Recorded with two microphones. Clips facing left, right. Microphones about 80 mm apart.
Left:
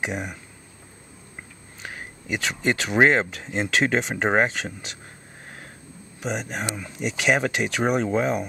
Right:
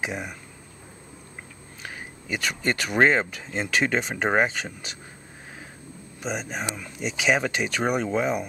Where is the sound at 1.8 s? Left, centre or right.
Centre.